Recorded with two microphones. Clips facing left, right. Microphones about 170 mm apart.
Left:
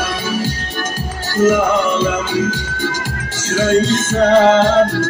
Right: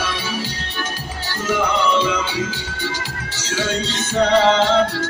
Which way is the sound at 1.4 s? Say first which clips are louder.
Left 7 dB; 45° left (ahead or behind).